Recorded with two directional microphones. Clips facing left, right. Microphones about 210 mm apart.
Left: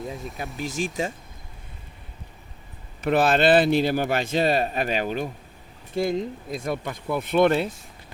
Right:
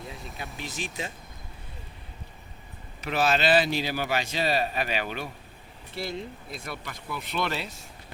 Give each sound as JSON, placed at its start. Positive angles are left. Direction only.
{"t": 0.3, "sound": "speech", "side_deg": 0}
{"t": 3.0, "sound": "a man's voice", "side_deg": 55}